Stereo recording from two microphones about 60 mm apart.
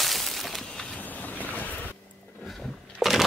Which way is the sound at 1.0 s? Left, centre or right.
Left.